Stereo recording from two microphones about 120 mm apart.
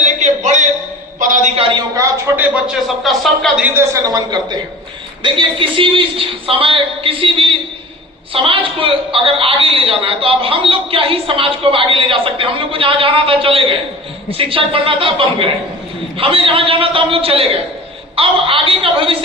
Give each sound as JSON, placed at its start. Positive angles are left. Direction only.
{"t": 0.0, "sound": "a sound", "side_deg": -80}
{"t": 2.0, "sound": "a man's voice", "side_deg": -25}
{"t": 2.6, "sound": "speech", "side_deg": 0}
{"t": 4.0, "sound": "a man's voice", "side_deg": -35}